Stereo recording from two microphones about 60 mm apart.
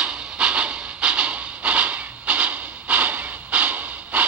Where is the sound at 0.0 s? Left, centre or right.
Centre.